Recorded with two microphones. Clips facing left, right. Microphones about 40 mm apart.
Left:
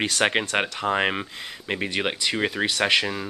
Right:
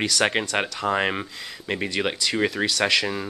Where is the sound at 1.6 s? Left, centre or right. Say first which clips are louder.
Right 1 dB; centre.